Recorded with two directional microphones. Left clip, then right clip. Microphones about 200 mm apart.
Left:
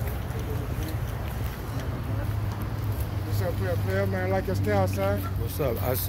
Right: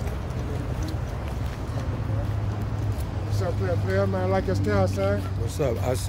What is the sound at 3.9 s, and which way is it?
Speech, 55° right (ahead or behind).